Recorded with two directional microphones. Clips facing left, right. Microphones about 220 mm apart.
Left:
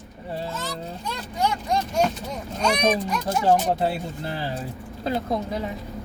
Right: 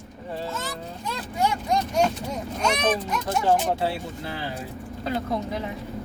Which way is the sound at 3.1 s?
Centre (ahead or behind).